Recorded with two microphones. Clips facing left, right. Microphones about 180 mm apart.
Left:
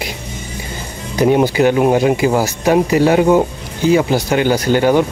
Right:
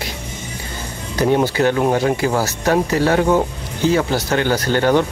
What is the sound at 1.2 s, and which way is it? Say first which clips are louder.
Speech: left 4 dB; 15° left (ahead or behind).